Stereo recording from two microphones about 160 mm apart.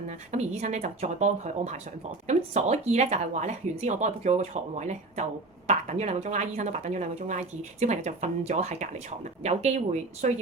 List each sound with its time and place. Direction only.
0.3 s speech: 45° right (ahead or behind)